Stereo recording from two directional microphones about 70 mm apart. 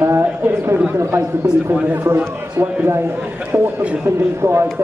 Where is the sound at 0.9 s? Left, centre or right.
Right.